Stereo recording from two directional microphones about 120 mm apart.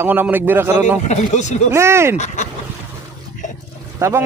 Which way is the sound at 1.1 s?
75° left (ahead or behind).